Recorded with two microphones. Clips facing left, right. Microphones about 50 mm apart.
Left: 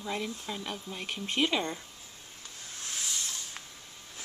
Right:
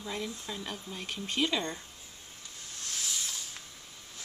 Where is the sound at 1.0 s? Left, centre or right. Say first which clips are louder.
Left 2 dB; left.